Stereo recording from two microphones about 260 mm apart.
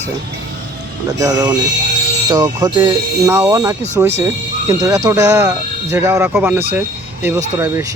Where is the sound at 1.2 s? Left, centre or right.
Centre.